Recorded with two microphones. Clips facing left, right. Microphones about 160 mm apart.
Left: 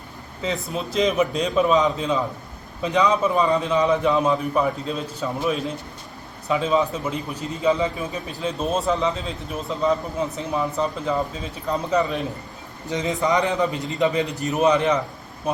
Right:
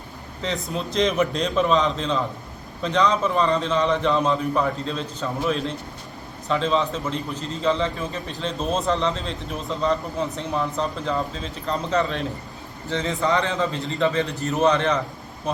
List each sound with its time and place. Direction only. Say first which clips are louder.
0.4 s a man's voice: left 1 dB; centre (ahead or behind)